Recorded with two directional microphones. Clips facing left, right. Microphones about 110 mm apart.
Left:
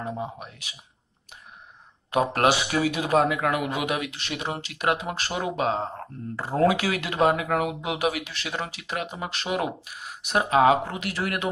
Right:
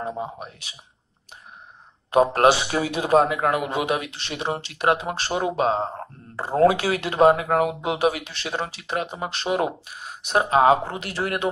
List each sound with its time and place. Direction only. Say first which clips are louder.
0.0 s speech: right 2 dB; 30° right (ahead or behind)
2.0 s speech: right 5 dB; 30° right (ahead or behind)